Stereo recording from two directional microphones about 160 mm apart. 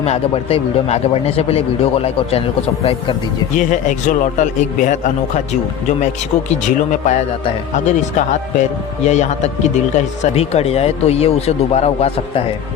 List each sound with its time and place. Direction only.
0.0 s a man's voice: 40° left (ahead or behind)
6.7 s a man's voice: 50° left (ahead or behind)